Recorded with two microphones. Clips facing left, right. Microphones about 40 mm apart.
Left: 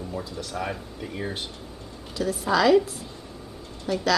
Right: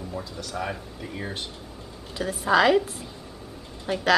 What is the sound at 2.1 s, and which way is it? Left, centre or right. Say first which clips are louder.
A woman's voice: right 2 dB; right.